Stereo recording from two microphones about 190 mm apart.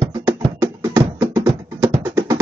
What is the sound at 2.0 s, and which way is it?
Music, 15° right (ahead or behind).